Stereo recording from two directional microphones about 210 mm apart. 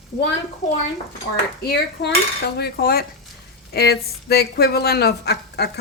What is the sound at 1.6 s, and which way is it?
Speech, 50° left (ahead or behind).